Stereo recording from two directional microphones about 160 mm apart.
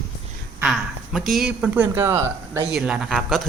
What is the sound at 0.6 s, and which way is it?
Speech, centre (ahead or behind).